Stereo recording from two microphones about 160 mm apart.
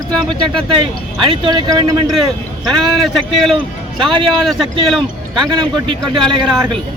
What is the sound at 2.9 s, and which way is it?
Speech, centre (ahead or behind).